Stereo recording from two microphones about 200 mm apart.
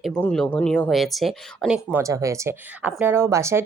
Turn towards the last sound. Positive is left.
turn(degrees=-15)  # may be behind; listen again after turning